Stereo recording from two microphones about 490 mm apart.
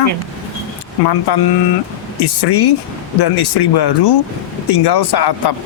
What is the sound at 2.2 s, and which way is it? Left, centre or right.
Speech, left.